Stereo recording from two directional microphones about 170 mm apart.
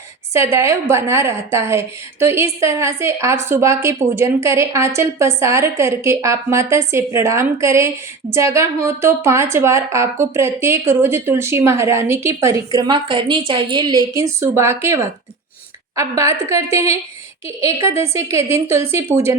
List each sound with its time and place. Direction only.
0.3 s a woman's voice: 15° right (ahead or behind)